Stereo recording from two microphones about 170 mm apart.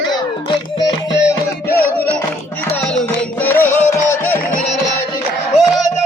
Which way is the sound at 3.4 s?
10° left (ahead or behind).